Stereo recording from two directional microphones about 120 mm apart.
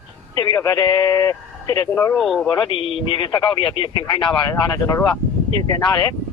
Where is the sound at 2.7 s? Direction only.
45° left (ahead or behind).